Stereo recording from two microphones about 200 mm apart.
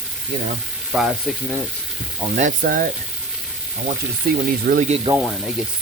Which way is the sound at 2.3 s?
40° right (ahead or behind).